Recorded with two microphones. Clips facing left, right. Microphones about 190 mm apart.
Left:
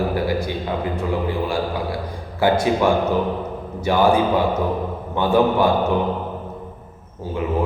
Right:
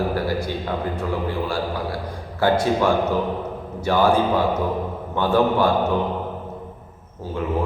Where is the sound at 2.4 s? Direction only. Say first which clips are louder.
Left 1 dB; 15° left (ahead or behind).